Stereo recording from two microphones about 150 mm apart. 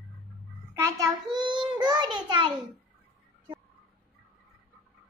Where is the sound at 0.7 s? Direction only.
20° right (ahead or behind).